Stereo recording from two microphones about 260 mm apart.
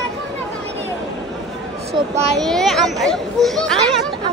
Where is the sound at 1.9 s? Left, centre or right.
Centre.